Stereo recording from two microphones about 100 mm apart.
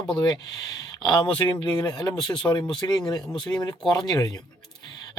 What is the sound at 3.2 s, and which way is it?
Speech, 5° left (ahead or behind).